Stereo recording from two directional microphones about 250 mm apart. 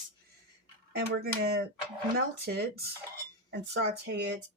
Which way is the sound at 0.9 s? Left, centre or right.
Right.